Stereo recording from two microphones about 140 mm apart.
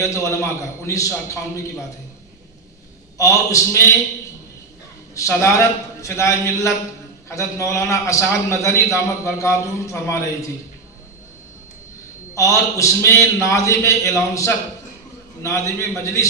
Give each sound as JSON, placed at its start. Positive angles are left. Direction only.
{"t": 0.0, "sound": "a man's voice", "side_deg": 20}
{"t": 3.2, "sound": "a man's voice", "side_deg": 20}
{"t": 5.1, "sound": "a man's voice", "side_deg": 20}
{"t": 12.4, "sound": "a man's voice", "side_deg": 20}